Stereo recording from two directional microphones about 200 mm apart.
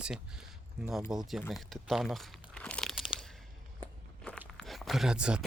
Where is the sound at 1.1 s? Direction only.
5° right (ahead or behind).